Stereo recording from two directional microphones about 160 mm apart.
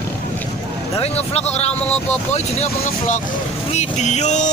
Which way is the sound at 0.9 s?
40° left (ahead or behind).